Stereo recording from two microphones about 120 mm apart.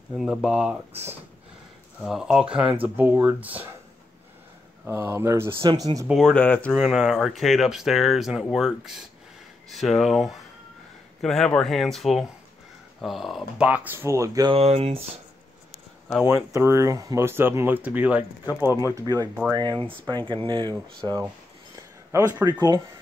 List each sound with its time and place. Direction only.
0.1 s speech: centre (ahead or behind)
2.0 s speech: 5° right (ahead or behind)
4.8 s speech: 20° right (ahead or behind)
5.6 s speech: 40° right (ahead or behind)
6.1 s speech: 10° left (ahead or behind)
6.7 s speech: 5° right (ahead or behind)
13.7 s speech: 15° right (ahead or behind)
14.5 s speech: 60° right (ahead or behind)
16.3 s speech: 25° right (ahead or behind)
18.7 s speech: 30° left (ahead or behind)
19.5 s speech: 35° right (ahead or behind)